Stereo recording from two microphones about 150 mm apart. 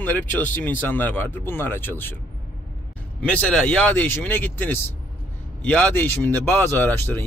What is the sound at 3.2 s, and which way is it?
Speech, 5° left (ahead or behind).